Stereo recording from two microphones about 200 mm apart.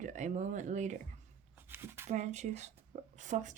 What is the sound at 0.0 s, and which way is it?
Speech, 40° right (ahead or behind).